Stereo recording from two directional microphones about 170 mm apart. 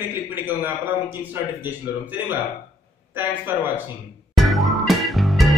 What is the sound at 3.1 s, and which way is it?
Speech, 10° right (ahead or behind).